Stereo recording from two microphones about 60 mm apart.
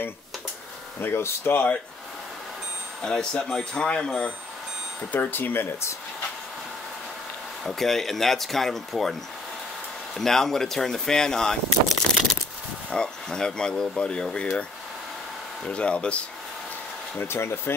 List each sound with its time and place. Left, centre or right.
1.0 s speech: left
3.0 s speech: centre
5.1 s speech: left
7.6 s speech: centre
10.1 s speech: centre
15.7 s speech: centre
17.2 s speech: left